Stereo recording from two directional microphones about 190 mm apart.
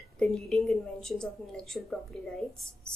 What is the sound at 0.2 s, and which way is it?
A woman's voice, 5° left (ahead or behind).